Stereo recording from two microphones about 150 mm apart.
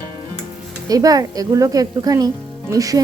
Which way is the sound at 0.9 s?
25° right (ahead or behind).